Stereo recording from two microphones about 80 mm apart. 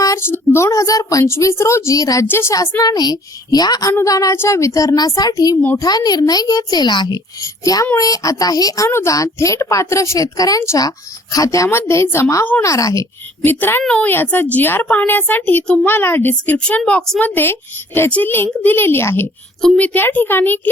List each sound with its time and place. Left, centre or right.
0.2 s a woman's voice: left
2.2 s a woman's voice: left
2.5 s a woman's voice: left
7.4 s a woman's voice: left
8.9 s a woman's voice: left
12.6 s a woman's voice: left
13.4 s a woman's voice: left
13.8 s a woman's voice: centre
15.6 s a woman's voice: centre
15.9 s a woman's voice: left
16.6 s a woman's voice: centre
19.6 s a woman's voice: centre